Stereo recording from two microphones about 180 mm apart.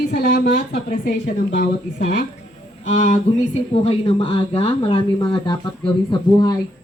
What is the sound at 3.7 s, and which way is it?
A man's voice, 30° left (ahead or behind).